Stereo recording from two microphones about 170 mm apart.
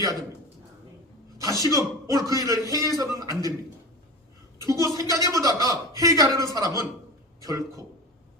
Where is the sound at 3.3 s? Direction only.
20° left (ahead or behind).